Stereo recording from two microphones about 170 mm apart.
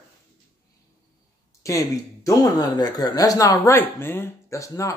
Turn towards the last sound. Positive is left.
turn(degrees=20)  # may be behind; listen again after turning